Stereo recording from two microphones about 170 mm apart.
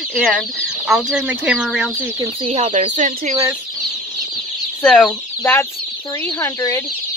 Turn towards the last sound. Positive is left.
turn(degrees=15)  # may be behind; listen again after turning